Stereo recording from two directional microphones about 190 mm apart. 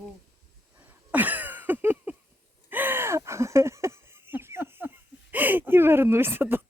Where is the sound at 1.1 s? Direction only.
10° right (ahead or behind).